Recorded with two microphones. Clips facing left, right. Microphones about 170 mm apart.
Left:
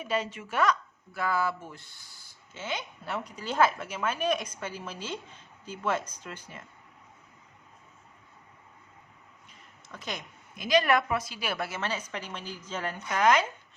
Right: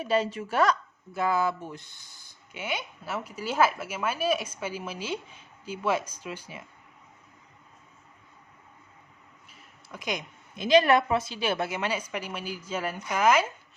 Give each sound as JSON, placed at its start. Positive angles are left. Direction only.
{"t": 0.0, "sound": "a woman's voice", "side_deg": -35}
{"t": 1.1, "sound": "speech", "side_deg": -20}
{"t": 9.5, "sound": "a sound", "side_deg": -10}
{"t": 10.5, "sound": "speech", "side_deg": -25}